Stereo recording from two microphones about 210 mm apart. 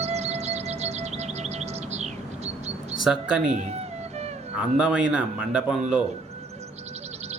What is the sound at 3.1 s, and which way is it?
Speech, centre (ahead or behind).